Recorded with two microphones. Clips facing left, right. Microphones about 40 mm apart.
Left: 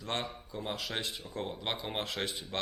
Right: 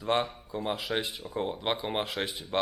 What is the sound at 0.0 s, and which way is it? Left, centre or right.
A man's voice, centre.